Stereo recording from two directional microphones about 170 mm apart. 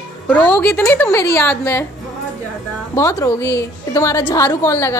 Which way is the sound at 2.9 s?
20° left (ahead or behind).